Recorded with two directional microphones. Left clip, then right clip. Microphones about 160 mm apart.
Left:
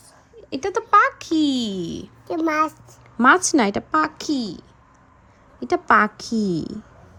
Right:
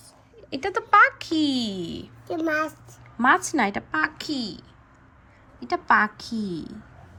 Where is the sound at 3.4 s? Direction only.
55° left (ahead or behind); by 4.2 s 35° left (ahead or behind).